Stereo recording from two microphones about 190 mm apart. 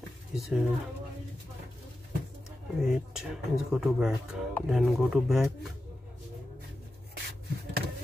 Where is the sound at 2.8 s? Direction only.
Centre (ahead or behind).